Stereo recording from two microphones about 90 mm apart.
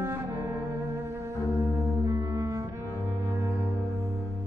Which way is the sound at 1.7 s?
Centre (ahead or behind).